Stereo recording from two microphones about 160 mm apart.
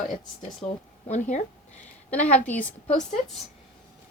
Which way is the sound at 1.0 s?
45° left (ahead or behind).